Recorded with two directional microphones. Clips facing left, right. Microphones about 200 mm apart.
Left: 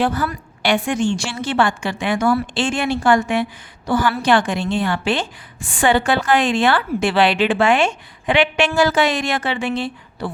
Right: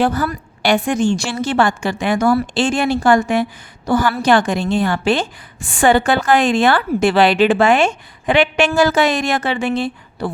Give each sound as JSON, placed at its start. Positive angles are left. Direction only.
{"t": 0.0, "sound": "a woman's voice", "side_deg": -40}